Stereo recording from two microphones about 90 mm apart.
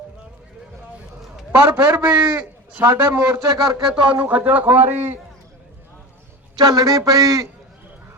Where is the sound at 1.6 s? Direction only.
20° right (ahead or behind).